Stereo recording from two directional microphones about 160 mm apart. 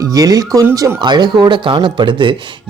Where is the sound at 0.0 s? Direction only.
20° right (ahead or behind).